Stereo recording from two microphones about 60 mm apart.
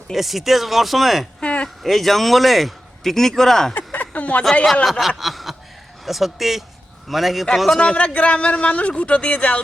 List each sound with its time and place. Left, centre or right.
0.1 s a man's voice: centre
1.4 s a sound: centre
1.8 s a man's voice: centre
3.8 s a sound: left
4.6 s a man's voice: centre
7.8 s speech: centre